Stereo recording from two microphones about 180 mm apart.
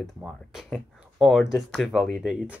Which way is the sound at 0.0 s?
Centre (ahead or behind).